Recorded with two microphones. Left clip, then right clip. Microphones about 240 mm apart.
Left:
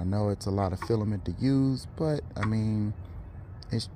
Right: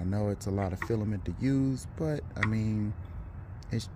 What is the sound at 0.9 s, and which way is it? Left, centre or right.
Speech, centre.